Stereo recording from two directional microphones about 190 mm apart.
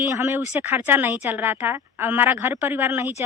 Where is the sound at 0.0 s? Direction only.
15° right (ahead or behind).